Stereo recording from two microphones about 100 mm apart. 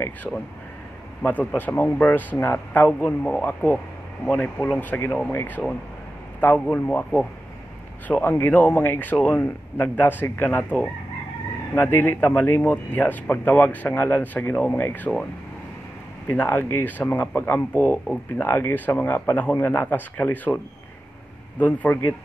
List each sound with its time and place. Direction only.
0.3 s a man's voice: 15° left (ahead or behind)
6.6 s a man's voice: 15° left (ahead or behind)
16.3 s speech: 20° left (ahead or behind)
21.5 s a man's voice: 15° left (ahead or behind)